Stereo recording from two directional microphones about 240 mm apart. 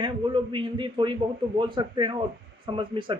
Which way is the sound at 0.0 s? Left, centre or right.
Right.